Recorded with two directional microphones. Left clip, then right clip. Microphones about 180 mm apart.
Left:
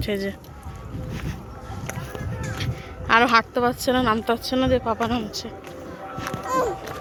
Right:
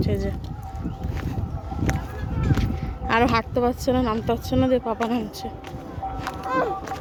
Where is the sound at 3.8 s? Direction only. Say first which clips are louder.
Left 2 dB; centre (ahead or behind).